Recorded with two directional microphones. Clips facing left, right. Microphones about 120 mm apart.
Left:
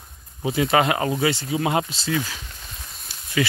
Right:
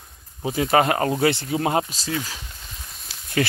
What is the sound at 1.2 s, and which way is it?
Speech, 55° right (ahead or behind).